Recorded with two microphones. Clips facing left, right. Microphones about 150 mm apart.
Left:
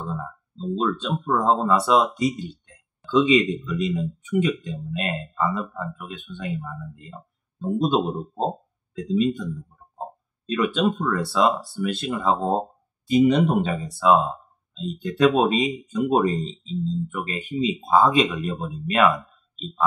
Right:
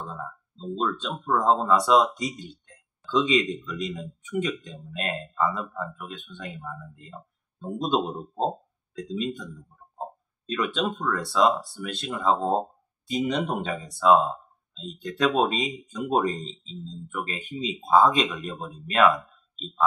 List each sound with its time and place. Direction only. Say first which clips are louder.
0.0 s speech: left 5 dB; centre (ahead or behind)
10.5 s speech: left 5 dB; 5° left (ahead or behind)